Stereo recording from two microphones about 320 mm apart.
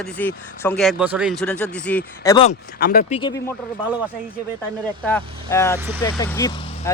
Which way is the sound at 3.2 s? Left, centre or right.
Centre.